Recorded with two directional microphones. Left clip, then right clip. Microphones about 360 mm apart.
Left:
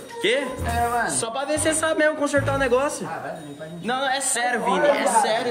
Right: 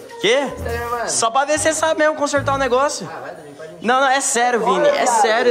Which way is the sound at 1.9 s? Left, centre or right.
Centre.